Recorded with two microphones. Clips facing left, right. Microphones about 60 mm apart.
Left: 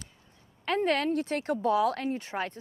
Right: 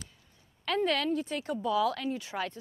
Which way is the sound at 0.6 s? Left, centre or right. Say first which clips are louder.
Left 2 dB; left.